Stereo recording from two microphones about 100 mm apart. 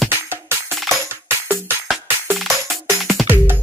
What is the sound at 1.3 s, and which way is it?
Music, 20° right (ahead or behind).